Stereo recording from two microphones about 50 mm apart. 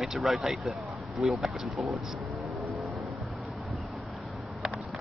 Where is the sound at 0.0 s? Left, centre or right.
Centre.